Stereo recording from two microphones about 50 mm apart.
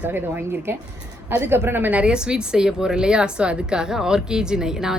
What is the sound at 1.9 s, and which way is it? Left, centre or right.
Speech, right.